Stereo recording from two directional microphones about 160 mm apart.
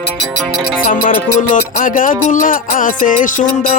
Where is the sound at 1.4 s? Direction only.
55° left (ahead or behind).